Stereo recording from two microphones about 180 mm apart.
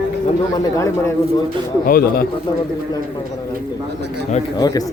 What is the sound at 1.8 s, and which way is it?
Speech, 55° left (ahead or behind).